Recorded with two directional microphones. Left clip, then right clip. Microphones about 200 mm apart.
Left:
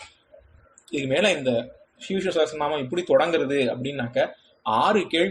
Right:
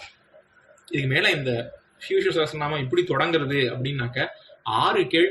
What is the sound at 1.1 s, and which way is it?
Speech, 45° left (ahead or behind).